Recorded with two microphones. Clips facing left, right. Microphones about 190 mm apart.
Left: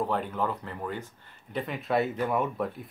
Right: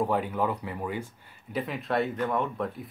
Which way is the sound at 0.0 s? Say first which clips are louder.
Right 2 dB; 10° right (ahead or behind).